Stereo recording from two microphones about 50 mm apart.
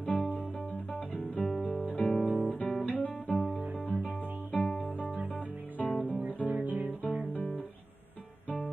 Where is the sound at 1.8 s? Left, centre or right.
Left.